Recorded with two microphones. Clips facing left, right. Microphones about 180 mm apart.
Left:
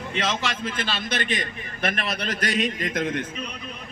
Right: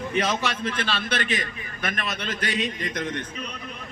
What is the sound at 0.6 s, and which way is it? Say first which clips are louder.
Speech: right 1 dB; 10° left (ahead or behind).